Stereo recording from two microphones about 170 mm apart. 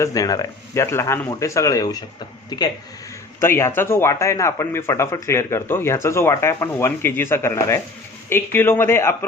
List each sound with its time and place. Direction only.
0.0 s speech: 20° left (ahead or behind)